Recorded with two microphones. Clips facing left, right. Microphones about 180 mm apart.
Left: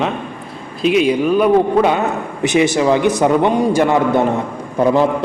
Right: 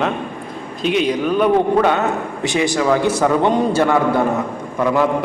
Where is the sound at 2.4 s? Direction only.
20° left (ahead or behind).